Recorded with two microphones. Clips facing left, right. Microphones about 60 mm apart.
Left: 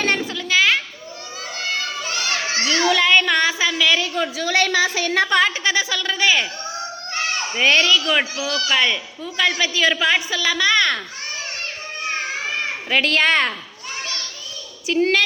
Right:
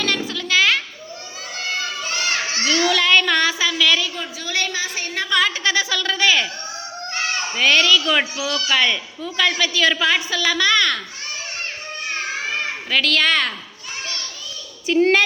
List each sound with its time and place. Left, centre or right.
0.0 s a sound: left
0.3 s children playing: centre
2.6 s child singing: centre
4.1 s a woman's voice: left
5.3 s a child's voice: left
5.7 s a man's voice: centre
7.5 s a man's voice: centre
10.7 s a child's voice: left
12.9 s a child's voice: left
14.8 s a child's voice: centre